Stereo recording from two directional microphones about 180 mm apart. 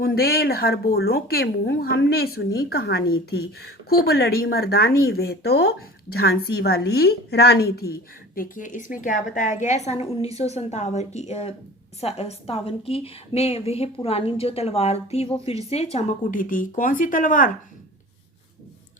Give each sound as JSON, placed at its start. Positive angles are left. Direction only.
{"t": 0.0, "sound": "a woman's voice", "side_deg": 60}
{"t": 8.4, "sound": "a woman's voice", "side_deg": 45}